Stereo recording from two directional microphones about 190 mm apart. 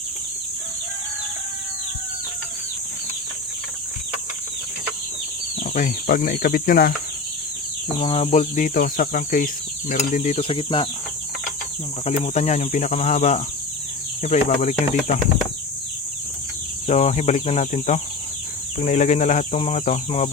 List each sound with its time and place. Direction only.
5.7 s speech: 45° left (ahead or behind)
7.9 s speech: 30° left (ahead or behind)
12.0 s speech: 35° left (ahead or behind)
16.8 s speech: 35° left (ahead or behind)